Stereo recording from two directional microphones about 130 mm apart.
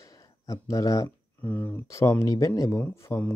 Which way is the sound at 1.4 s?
15° left (ahead or behind).